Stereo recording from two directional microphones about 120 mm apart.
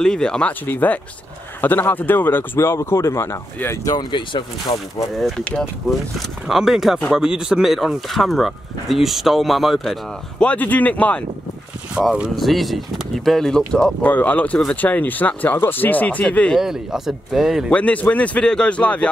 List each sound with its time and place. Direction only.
0.0 s speech: 5° left (ahead or behind); by 3.8 s 20° left (ahead or behind)
3.8 s speech: 40° left (ahead or behind)
5.4 s speech: 10° left (ahead or behind)
6.1 s speech: 5° right (ahead or behind)
10.4 s speech: 10° left (ahead or behind)
11.9 s speech: 5° right (ahead or behind); by 16.5 s 10° left (ahead or behind)
16.5 s speech: 5° right (ahead or behind)
17.6 s speech: 10° left (ahead or behind)